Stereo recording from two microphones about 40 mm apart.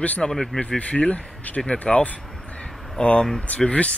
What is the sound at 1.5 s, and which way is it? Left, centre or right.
Speech, left.